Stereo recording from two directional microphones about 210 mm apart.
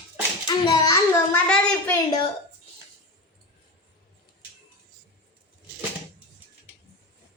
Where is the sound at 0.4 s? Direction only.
20° left (ahead or behind).